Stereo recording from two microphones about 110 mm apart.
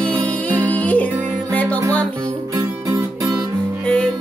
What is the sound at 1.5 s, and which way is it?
Music, 10° left (ahead or behind).